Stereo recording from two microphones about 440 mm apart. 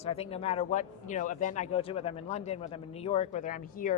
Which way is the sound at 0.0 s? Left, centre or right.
Centre.